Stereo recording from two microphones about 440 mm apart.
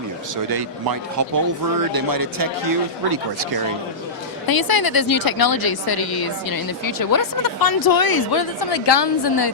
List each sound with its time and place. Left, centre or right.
0.5 s a man's voice: right
4.4 s a woman's voice: left